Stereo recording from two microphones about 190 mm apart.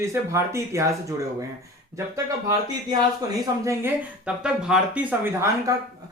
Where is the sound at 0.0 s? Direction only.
15° right (ahead or behind).